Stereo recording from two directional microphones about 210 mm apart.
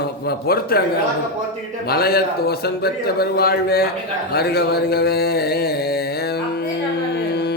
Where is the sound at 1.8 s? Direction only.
50° left (ahead or behind).